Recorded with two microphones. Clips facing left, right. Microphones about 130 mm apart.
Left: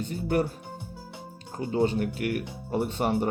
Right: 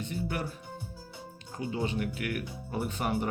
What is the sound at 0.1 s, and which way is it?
Speech, 40° left (ahead or behind).